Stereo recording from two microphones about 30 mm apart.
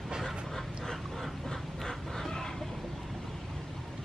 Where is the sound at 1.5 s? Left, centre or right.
Centre.